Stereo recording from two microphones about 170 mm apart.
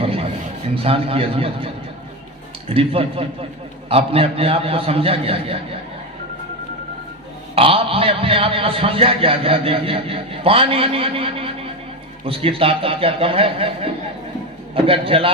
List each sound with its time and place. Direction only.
0.0 s a sound: 35° right (ahead or behind)
0.8 s a man's voice: 35° right (ahead or behind)
7.5 s a man's voice: 35° right (ahead or behind)